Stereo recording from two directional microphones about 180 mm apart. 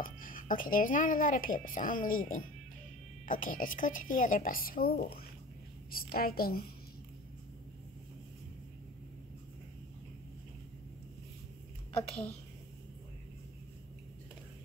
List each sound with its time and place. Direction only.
0.0 s a woman's voice: 50° left (ahead or behind)
11.9 s a woman's voice: 35° left (ahead or behind)